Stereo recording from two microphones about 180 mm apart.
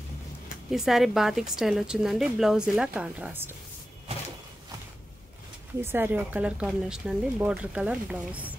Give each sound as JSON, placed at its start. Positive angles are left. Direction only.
{"t": 0.7, "sound": "a woman's voice", "side_deg": 0}
{"t": 5.8, "sound": "speech", "side_deg": -10}